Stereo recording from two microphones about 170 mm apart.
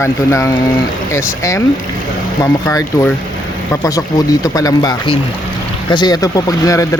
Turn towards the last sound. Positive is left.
turn(degrees=20)  # may be behind; listen again after turning